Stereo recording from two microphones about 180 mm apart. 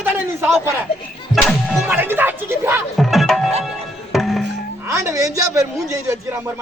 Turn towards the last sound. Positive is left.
turn(degrees=-20)  # may be behind; listen again after turning